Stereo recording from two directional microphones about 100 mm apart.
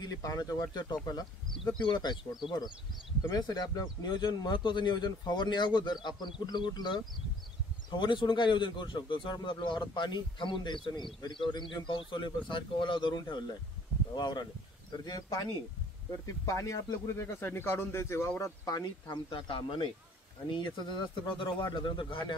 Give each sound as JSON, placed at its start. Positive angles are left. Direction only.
{"t": 0.0, "sound": "a man's voice", "side_deg": 35}
{"t": 3.3, "sound": "a man's voice", "side_deg": 40}
{"t": 18.4, "sound": "a man's voice", "side_deg": 40}